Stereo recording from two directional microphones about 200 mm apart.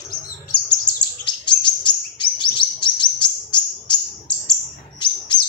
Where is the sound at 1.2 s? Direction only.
25° left (ahead or behind).